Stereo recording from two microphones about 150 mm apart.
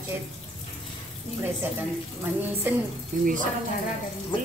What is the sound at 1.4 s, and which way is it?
A woman's voice, 15° right (ahead or behind).